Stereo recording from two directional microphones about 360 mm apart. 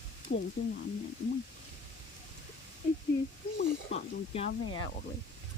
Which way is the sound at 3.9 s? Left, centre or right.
Centre.